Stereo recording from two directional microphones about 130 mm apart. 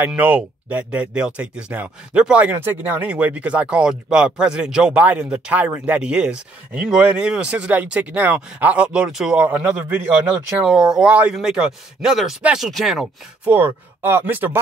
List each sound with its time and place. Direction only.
0.0 s speech: 15° right (ahead or behind)
13.5 s speech: 15° right (ahead or behind)